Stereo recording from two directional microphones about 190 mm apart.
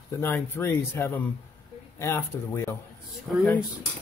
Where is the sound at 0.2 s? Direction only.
10° left (ahead or behind).